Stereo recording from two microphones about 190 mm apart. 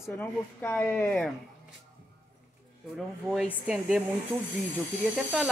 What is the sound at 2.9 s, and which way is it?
Speech, centre (ahead or behind).